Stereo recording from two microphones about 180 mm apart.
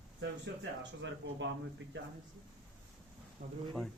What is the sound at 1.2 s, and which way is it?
Speech, 70° right (ahead or behind).